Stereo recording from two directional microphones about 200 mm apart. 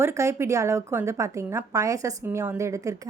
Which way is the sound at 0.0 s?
15° right (ahead or behind).